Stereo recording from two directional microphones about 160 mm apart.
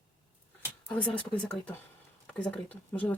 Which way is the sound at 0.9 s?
10° left (ahead or behind).